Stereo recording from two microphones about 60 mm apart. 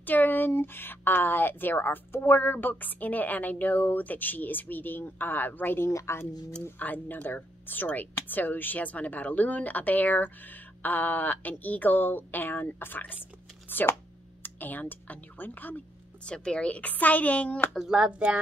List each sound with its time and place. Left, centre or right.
0.0 s a sound: left
0.5 s speech: left
5.8 s speech: left
6.8 s speech: left
16.3 s a woman's voice: centre
17.7 s speech: centre